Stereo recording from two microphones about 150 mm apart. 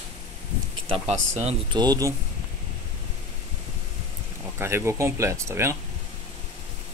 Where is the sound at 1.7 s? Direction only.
25° right (ahead or behind).